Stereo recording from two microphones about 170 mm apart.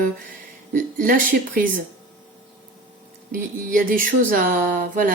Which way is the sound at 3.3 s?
55° right (ahead or behind).